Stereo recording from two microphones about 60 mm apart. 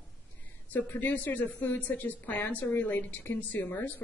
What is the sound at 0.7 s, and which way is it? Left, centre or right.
A woman's voice, left.